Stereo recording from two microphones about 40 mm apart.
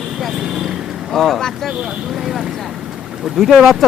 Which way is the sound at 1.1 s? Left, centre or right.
Centre.